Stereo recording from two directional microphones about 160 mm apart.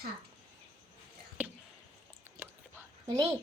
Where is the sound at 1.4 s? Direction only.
10° right (ahead or behind).